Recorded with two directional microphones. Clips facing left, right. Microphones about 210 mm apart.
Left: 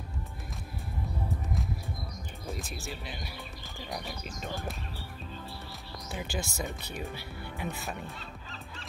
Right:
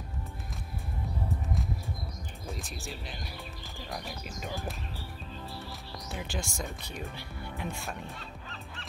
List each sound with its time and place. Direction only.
2.4 s speech: centre (ahead or behind)
6.1 s speech: centre (ahead or behind)